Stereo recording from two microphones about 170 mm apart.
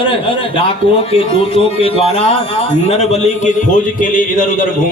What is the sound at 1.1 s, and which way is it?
A man's voice, 35° left (ahead or behind).